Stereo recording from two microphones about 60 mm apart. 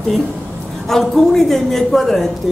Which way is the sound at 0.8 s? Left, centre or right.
Centre.